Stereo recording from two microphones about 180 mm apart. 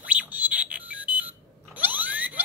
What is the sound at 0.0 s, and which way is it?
Alarm clock, 10° right (ahead or behind).